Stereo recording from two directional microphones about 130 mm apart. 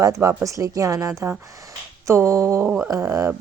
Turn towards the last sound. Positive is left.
turn(degrees=-20)  # may be behind; listen again after turning